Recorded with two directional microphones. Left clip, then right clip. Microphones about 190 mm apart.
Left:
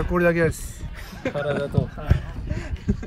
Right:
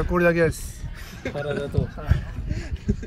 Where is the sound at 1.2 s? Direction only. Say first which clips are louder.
Left 4 dB; 45° left (ahead or behind).